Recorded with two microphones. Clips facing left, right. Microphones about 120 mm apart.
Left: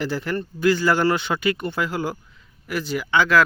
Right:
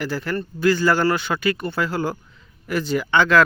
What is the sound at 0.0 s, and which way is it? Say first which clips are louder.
Speech: even; 20° left (ahead or behind).